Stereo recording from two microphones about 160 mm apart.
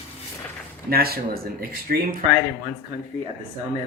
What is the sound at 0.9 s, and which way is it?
Speech, 70° right (ahead or behind).